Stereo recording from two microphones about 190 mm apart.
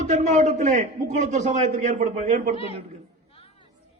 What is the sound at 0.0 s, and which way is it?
A man's voice, 40° right (ahead or behind).